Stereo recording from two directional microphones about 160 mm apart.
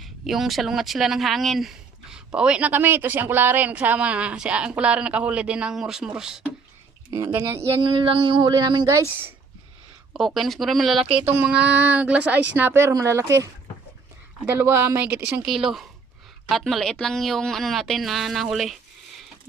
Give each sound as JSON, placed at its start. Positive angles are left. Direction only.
{"t": 0.0, "sound": "speech", "side_deg": 0}
{"t": 7.1, "sound": "speech", "side_deg": -15}
{"t": 7.8, "sound": "speech", "side_deg": -30}
{"t": 10.2, "sound": "speech", "side_deg": 0}